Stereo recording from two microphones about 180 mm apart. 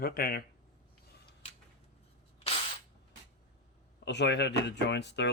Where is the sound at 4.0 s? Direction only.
70° left (ahead or behind).